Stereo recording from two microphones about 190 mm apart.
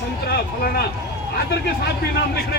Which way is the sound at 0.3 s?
55° left (ahead or behind).